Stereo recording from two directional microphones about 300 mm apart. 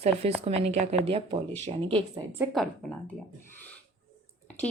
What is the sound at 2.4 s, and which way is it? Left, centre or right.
Speech, centre.